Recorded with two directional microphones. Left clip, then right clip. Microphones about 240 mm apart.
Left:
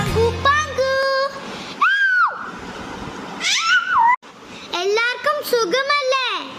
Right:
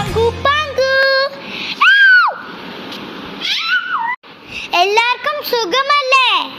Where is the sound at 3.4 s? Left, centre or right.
Left.